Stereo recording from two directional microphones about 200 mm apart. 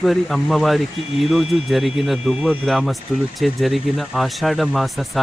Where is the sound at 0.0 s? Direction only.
Centre (ahead or behind).